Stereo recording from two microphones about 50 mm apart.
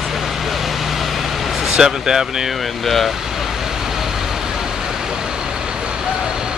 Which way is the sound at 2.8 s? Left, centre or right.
Centre.